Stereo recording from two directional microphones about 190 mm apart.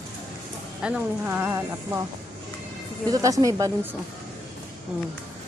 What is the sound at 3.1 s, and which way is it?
Speech, 20° right (ahead or behind).